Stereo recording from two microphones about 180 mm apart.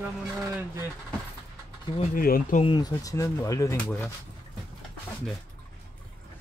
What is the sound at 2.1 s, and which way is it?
Speech, 50° left (ahead or behind).